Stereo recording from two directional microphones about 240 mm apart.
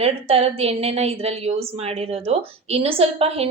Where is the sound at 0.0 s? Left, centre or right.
Right.